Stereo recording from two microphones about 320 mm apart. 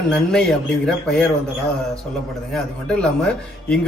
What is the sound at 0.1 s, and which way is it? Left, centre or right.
Speech, centre.